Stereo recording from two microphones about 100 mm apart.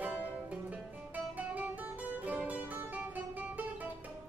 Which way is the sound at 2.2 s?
15° right (ahead or behind).